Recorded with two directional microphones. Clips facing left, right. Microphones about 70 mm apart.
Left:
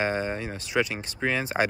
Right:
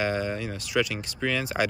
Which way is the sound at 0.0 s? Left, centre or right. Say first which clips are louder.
Even; left.